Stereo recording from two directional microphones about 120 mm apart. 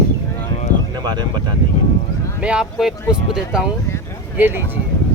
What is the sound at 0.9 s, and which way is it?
Speech, 35° right (ahead or behind).